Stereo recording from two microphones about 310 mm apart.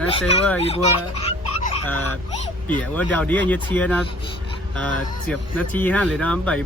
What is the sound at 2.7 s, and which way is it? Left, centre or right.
Speech, centre.